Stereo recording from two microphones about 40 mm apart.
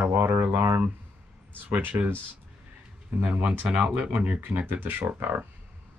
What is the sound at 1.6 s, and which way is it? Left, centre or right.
Speech, right.